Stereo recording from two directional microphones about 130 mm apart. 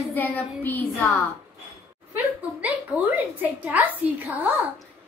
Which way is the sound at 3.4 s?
10° right (ahead or behind).